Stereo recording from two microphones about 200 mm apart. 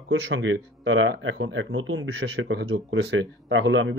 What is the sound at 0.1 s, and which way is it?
Speech, 70° right (ahead or behind).